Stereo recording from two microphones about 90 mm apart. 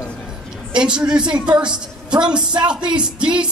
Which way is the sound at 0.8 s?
10° right (ahead or behind).